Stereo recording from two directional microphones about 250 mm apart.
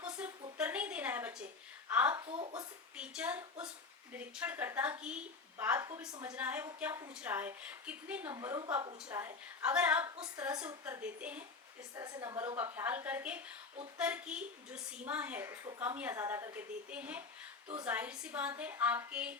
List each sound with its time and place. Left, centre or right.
0.0 s a sound: centre
1.9 s a woman's voice: centre
2.2 s speech: right
2.9 s a woman's voice: centre